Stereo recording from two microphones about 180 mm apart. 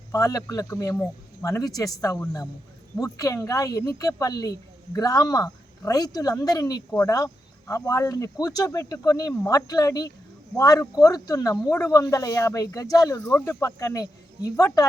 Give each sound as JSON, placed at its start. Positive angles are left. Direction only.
{"t": 0.1, "sound": "speech", "side_deg": 20}